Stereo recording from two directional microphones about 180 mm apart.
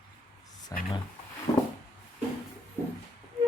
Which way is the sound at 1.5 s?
25° left (ahead or behind).